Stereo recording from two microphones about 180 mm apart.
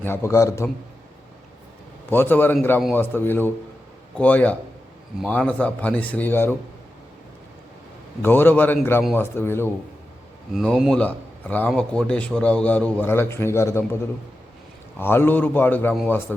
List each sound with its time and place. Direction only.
0.0 s a man's voice: 15° left (ahead or behind)
2.0 s a man's voice: 10° left (ahead or behind)
8.2 s a man's voice: 10° left (ahead or behind)
10.5 s a man's voice: centre (ahead or behind); by 13.8 s 15° left (ahead or behind)
14.9 s a man's voice: 10° left (ahead or behind)